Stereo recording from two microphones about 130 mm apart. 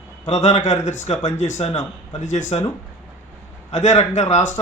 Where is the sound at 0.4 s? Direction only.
60° left (ahead or behind).